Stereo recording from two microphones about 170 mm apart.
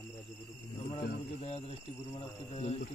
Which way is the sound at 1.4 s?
35° left (ahead or behind).